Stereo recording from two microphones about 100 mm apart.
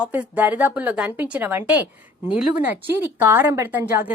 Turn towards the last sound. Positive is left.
turn(degrees=-20)  # may be behind; listen again after turning